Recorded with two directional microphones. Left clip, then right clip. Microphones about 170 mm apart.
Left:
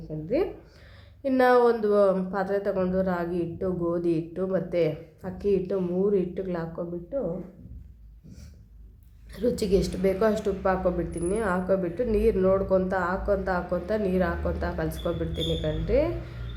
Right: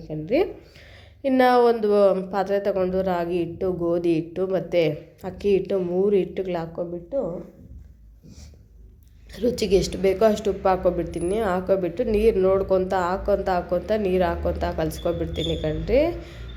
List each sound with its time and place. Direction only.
0.1 s a woman's voice: 20° right (ahead or behind)
9.3 s a woman's voice: 10° right (ahead or behind)